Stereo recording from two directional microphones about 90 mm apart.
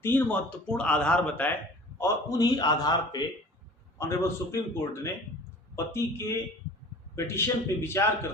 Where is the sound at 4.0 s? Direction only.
30° left (ahead or behind).